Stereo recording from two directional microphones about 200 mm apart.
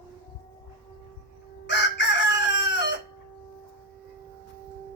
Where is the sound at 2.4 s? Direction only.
65° left (ahead or behind).